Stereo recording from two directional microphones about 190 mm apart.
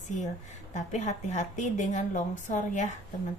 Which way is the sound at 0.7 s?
40° left (ahead or behind).